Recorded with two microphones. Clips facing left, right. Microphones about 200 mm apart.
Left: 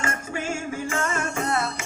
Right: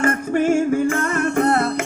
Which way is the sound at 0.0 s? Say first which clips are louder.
Right 11 dB; 55° right (ahead or behind).